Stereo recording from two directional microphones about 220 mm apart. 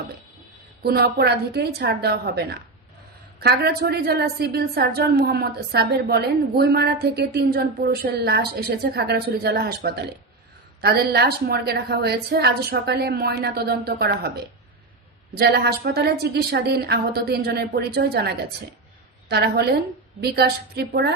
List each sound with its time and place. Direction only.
0.8 s a woman's voice: 45° right (ahead or behind)
15.4 s a woman's voice: 45° right (ahead or behind)